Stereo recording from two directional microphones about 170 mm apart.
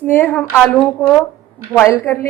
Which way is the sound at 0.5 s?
5° right (ahead or behind).